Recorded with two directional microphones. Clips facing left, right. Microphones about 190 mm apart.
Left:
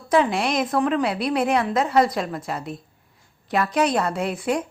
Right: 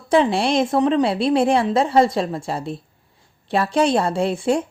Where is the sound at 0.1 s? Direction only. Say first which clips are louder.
Right 3 dB; 30° right (ahead or behind).